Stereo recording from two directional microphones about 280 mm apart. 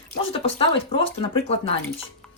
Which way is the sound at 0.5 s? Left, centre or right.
Centre.